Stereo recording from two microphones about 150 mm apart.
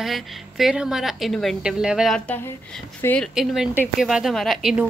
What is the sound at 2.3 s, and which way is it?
A woman's voice, 10° left (ahead or behind).